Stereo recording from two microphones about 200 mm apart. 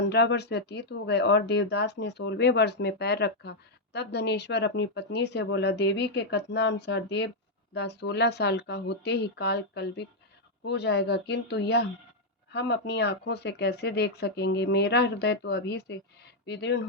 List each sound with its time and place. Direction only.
0.1 s speech: 55° left (ahead or behind)